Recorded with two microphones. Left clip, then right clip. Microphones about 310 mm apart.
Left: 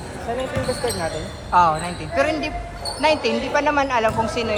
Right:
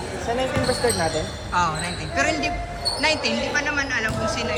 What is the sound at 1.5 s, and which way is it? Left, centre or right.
A woman's voice, centre.